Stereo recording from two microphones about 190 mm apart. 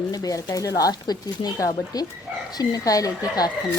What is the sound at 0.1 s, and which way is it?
Speech, 20° left (ahead or behind).